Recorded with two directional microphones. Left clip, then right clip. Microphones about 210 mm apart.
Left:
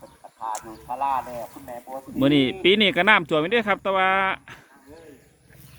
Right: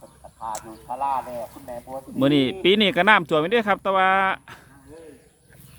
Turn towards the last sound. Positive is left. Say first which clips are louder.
# right 2 dB
turn(degrees=-5)  # may be behind; listen again after turning